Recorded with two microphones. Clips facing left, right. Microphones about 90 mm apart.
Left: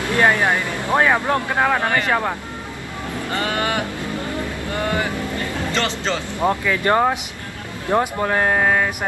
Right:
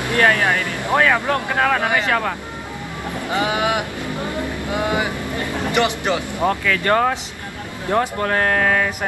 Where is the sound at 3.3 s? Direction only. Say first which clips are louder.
Right 3 dB; 15° right (ahead or behind).